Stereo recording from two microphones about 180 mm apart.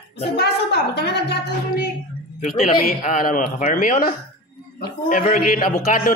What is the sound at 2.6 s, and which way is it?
A man's voice, 45° left (ahead or behind).